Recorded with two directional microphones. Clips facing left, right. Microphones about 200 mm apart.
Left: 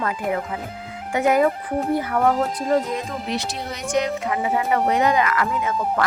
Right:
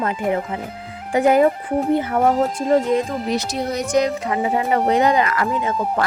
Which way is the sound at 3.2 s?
40° right (ahead or behind).